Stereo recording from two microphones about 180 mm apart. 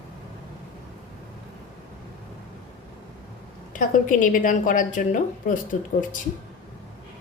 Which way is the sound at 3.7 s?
50° left (ahead or behind).